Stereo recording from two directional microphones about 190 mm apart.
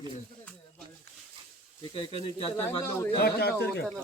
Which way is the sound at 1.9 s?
25° left (ahead or behind).